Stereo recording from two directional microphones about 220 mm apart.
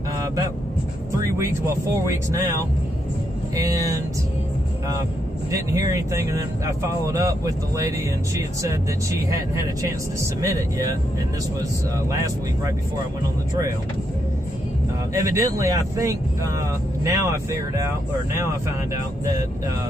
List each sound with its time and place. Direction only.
1.2 s speech: 10° right (ahead or behind)
3.5 s speech: 15° right (ahead or behind)
5.5 s speech: 15° right (ahead or behind)
10.4 s speech: 15° right (ahead or behind)
15.1 s speech: 15° right (ahead or behind)